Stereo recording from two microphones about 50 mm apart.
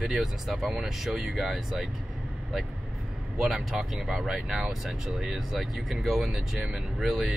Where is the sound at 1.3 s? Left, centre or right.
Centre.